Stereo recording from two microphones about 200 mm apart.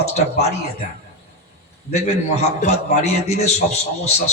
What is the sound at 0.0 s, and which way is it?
Speech, 35° left (ahead or behind).